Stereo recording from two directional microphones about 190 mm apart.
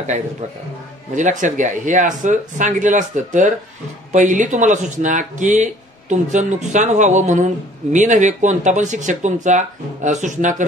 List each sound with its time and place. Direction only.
1.1 s speech: 40° right (ahead or behind)